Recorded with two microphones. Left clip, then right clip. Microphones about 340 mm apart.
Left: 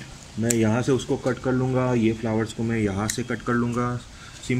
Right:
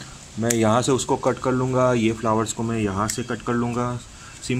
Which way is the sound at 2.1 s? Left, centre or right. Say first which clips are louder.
Right 4 dB; right.